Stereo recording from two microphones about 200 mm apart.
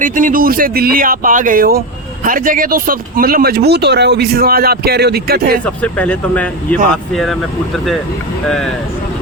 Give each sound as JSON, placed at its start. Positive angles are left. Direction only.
{"t": 0.0, "sound": "speech", "side_deg": -40}
{"t": 5.6, "sound": "speech", "side_deg": 5}
{"t": 8.4, "sound": "speech", "side_deg": 5}